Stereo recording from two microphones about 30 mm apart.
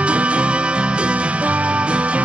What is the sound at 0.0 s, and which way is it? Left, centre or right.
Music, right.